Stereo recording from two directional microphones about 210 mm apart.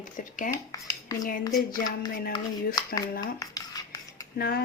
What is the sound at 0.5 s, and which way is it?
Speech, 15° left (ahead or behind).